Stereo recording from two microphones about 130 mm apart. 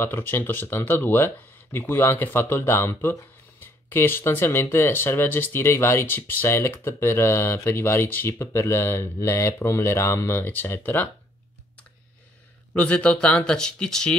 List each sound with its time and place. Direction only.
0.0 s speech: 15° left (ahead or behind)
12.7 s speech: 10° left (ahead or behind)